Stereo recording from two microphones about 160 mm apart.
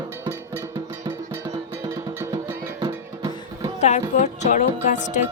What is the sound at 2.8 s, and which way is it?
Music, 20° right (ahead or behind).